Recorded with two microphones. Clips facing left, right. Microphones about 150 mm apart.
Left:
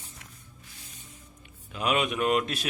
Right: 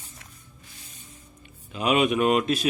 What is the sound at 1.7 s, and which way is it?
Speech, 5° right (ahead or behind).